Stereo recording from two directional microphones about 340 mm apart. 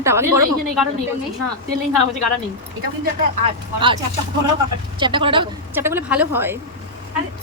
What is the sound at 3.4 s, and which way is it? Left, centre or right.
Speech, centre.